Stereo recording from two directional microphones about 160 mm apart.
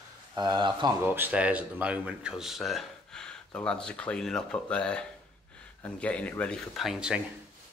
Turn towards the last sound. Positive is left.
turn(degrees=-5)  # may be behind; listen again after turning